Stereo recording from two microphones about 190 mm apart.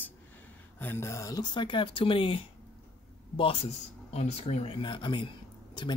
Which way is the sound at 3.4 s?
30° left (ahead or behind).